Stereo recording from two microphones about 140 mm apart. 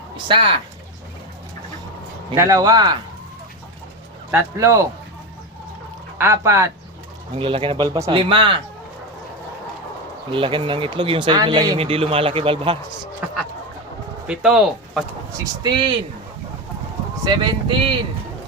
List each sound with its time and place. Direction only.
0.3 s speech: 40° right (ahead or behind)
2.3 s speech: 15° right (ahead or behind)
2.6 s speech: 30° right (ahead or behind)
4.3 s speech: 20° right (ahead or behind)
6.1 s speech: 20° right (ahead or behind)
7.3 s speech: 35° right (ahead or behind)
10.3 s speech: 35° right (ahead or behind)
11.8 s speech: 45° right (ahead or behind)
14.3 s speech: 5° right (ahead or behind)
15.6 s speech: 35° right (ahead or behind)
17.2 s speech: 35° right (ahead or behind)